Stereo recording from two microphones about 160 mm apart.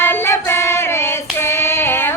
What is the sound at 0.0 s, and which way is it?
Child singing, 15° left (ahead or behind).